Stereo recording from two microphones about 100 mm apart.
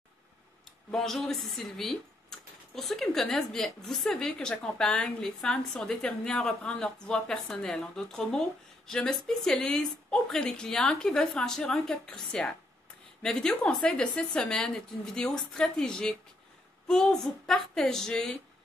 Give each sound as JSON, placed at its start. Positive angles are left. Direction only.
{"t": 0.9, "sound": "a woman's voice", "side_deg": 5}